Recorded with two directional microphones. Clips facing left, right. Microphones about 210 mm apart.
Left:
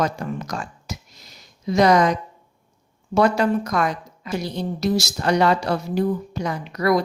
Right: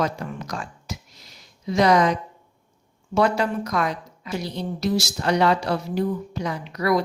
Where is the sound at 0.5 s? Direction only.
40° left (ahead or behind).